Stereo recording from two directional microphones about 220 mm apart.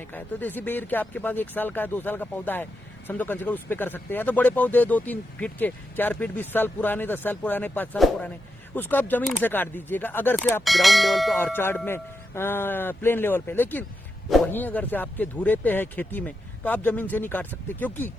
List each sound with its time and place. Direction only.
0.1 s speech: 10° left (ahead or behind)